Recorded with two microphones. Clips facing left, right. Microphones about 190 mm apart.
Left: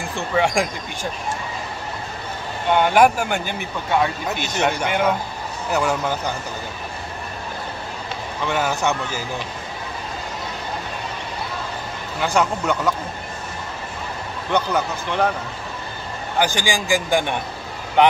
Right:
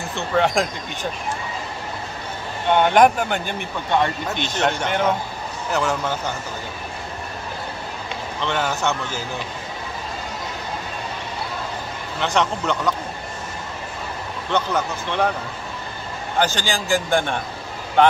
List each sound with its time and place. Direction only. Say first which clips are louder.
0.3 s speech: right 1 dB; 10° left (ahead or behind)
2.7 s speech: even; 5° left (ahead or behind)
8.4 s speech: left 1 dB; 10° left (ahead or behind)
12.2 s speech: left 1 dB; 10° left (ahead or behind)
14.5 s speech: left 1 dB; 10° left (ahead or behind)
16.3 s speech: left 1 dB; 15° left (ahead or behind)